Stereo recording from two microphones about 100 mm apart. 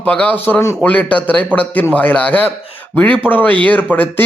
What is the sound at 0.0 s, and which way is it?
Speech, 15° left (ahead or behind).